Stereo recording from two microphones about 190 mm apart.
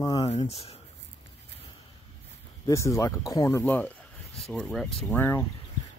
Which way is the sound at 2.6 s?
15° left (ahead or behind).